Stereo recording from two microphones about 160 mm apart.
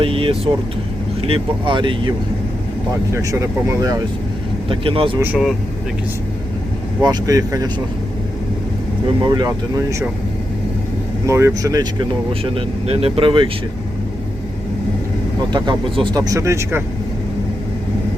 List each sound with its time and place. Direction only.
0.0 s speech: 35° right (ahead or behind)
3.1 s speech: 20° right (ahead or behind)
4.7 s speech: 35° right (ahead or behind)
5.2 s speech: 5° right (ahead or behind)
7.0 s speech: 25° right (ahead or behind)
9.2 s speech: 30° right (ahead or behind)
11.3 s speech: 15° right (ahead or behind); by 13.5 s 30° right (ahead or behind)
15.5 s speech: 30° right (ahead or behind)